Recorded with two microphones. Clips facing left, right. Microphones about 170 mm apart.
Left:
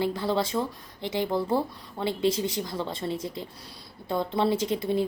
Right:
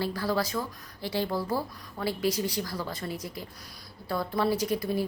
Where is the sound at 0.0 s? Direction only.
25° left (ahead or behind).